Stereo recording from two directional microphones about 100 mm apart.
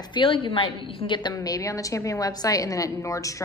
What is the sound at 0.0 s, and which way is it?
A woman's voice, 55° left (ahead or behind).